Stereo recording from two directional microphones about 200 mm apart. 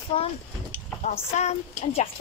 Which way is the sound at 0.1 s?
30° left (ahead or behind).